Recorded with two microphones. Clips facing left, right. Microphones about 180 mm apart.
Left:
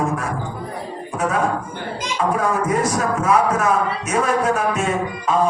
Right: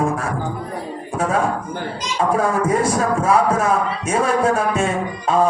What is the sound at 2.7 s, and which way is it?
Speech, 30° right (ahead or behind).